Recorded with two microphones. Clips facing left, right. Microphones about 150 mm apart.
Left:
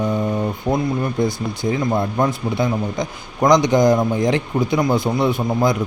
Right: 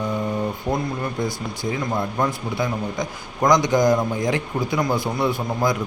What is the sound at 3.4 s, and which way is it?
A man's voice, 20° left (ahead or behind).